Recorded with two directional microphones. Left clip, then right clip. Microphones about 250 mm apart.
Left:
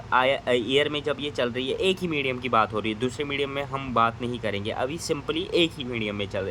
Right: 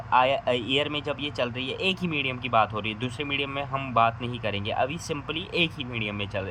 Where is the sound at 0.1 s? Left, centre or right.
Centre.